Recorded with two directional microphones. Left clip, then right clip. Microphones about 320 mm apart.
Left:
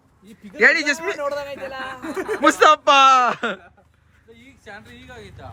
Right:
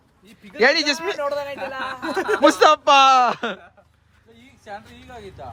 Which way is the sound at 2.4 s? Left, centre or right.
Centre.